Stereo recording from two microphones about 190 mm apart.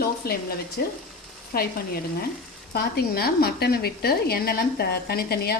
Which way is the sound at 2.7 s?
55° left (ahead or behind).